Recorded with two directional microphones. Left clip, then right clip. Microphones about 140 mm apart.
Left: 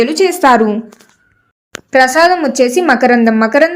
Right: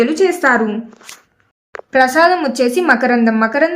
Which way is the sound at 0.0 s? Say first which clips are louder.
Left 3 dB; 35° left (ahead or behind).